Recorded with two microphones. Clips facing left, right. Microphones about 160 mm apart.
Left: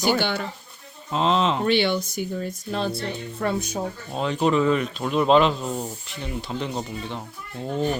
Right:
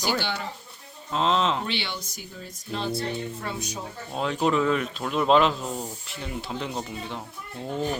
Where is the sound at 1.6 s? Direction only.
50° left (ahead or behind).